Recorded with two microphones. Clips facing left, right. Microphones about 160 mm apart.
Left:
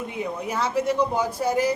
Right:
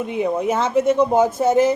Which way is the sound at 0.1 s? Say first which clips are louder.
Right 9 dB; 20° right (ahead or behind).